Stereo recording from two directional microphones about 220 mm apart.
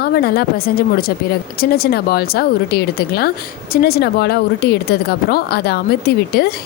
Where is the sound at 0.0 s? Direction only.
45° left (ahead or behind).